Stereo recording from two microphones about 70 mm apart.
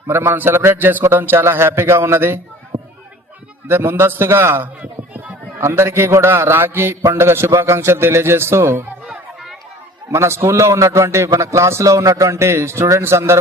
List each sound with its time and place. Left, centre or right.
0.1 s a man's voice: right
3.7 s a man's voice: right
9.0 s chatter: centre
10.1 s a man's voice: right